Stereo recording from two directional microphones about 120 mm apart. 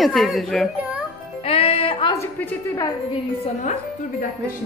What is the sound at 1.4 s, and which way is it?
Music, 55° left (ahead or behind).